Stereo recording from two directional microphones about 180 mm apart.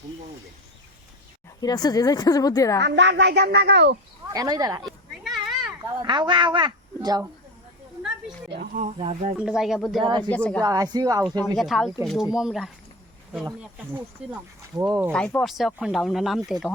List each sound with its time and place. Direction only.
1.6 s speech: 20° left (ahead or behind)
2.8 s speech: 80° right
4.3 s speech: 20° right (ahead or behind)
4.9 s children playing: centre (ahead or behind)
5.8 s a woman's voice: 20° right (ahead or behind)
8.4 s speech: 60° right (ahead or behind)
8.7 s speech: 40° right (ahead or behind)
9.4 s speech: 5° right (ahead or behind)
10.0 s speech: 25° right (ahead or behind)
10.2 s a woman's voice: 5° left (ahead or behind)
10.6 s speech: 20° right (ahead or behind)
11.2 s speech: centre (ahead or behind)
14.8 s speech: 15° right (ahead or behind)
15.1 s speech: 5° left (ahead or behind)